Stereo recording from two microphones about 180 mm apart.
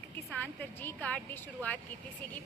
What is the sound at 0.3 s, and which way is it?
A woman's voice, 10° left (ahead or behind).